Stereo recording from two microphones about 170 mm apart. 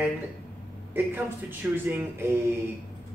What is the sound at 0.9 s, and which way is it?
Speech, 10° right (ahead or behind).